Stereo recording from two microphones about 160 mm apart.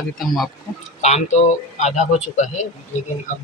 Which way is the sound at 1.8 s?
50° left (ahead or behind).